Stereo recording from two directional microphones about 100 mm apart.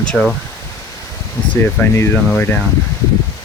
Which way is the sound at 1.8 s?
25° left (ahead or behind).